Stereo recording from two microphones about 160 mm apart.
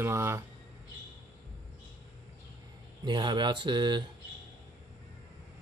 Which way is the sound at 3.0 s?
30° right (ahead or behind).